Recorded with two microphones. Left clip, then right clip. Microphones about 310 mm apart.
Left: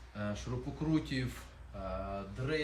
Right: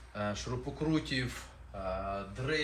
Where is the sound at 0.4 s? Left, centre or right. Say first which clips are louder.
Right 3 dB; centre.